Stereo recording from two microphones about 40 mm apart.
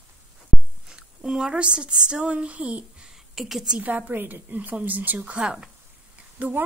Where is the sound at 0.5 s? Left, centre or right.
Centre.